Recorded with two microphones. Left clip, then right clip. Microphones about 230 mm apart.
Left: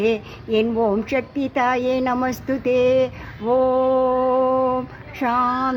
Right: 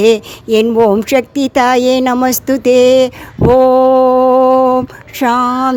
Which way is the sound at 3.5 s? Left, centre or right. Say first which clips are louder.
Right 10 dB; right.